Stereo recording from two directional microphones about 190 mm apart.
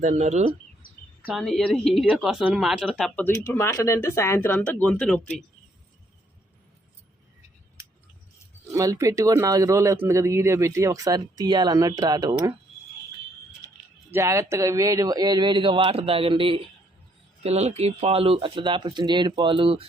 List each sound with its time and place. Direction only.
0.0 s speech: 40° right (ahead or behind)
1.2 s speech: centre (ahead or behind)
8.6 s speech: 15° right (ahead or behind)
14.1 s speech: 15° right (ahead or behind)